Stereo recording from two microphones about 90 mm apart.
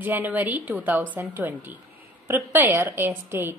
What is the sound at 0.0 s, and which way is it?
A woman's voice, 20° right (ahead or behind).